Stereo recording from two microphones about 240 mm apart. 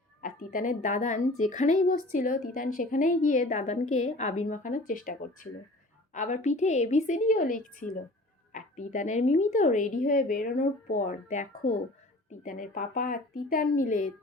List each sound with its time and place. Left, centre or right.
0.2 s a woman's voice: left